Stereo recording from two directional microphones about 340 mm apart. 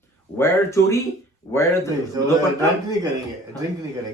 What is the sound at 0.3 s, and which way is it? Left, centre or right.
Speech, centre.